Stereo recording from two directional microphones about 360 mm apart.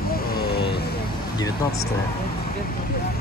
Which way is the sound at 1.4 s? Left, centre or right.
Centre.